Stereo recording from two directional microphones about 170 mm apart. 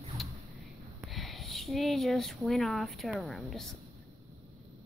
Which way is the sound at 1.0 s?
Centre (ahead or behind).